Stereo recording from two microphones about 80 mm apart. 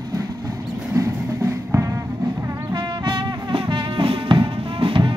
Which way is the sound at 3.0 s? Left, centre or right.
Right.